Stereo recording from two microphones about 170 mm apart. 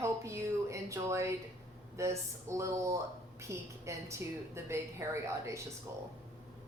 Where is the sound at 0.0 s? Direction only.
15° right (ahead or behind).